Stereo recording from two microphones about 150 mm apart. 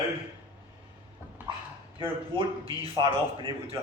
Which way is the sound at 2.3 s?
35° right (ahead or behind).